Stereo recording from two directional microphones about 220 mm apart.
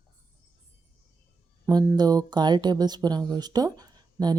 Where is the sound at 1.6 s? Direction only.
15° right (ahead or behind).